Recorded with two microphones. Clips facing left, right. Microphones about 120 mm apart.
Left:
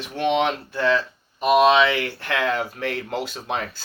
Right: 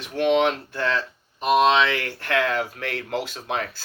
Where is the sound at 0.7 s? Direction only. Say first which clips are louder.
Left 4 dB; 15° left (ahead or behind).